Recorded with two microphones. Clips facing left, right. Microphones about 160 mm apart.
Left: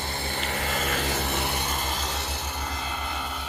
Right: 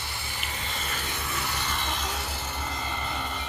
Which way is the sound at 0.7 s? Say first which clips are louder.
Left 8 dB; 50° left (ahead or behind).